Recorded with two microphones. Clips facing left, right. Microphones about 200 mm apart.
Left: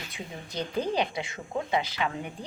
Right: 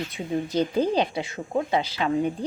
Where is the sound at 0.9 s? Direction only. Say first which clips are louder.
Right 5 dB; 25° right (ahead or behind).